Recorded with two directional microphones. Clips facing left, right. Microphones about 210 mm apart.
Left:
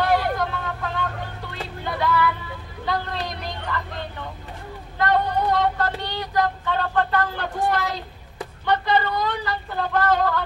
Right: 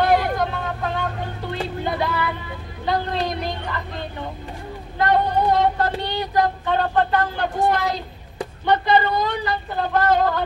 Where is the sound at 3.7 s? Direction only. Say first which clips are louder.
Left 1 dB; 20° right (ahead or behind).